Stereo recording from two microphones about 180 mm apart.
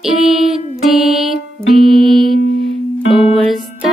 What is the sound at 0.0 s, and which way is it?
Music, 5° right (ahead or behind).